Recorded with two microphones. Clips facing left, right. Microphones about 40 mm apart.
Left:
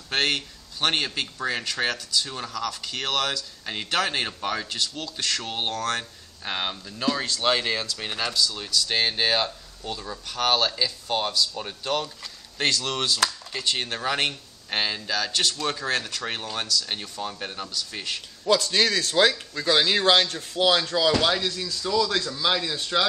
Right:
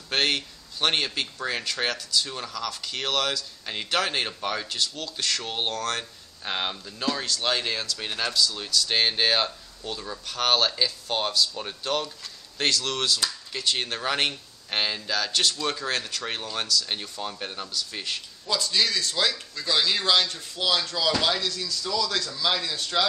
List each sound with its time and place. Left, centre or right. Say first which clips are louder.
0.1 s speech: even; centre
18.4 s speech: left 5 dB; left
21.1 s speech: left 1 dB; centre
21.4 s a man's voice: left 1 dB; left; by 23.1 s centre